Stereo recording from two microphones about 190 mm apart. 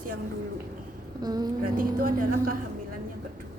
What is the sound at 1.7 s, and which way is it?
Speech, 50° right (ahead or behind).